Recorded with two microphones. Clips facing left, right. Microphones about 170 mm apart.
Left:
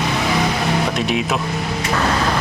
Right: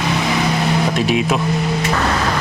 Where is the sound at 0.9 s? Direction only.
Centre (ahead or behind).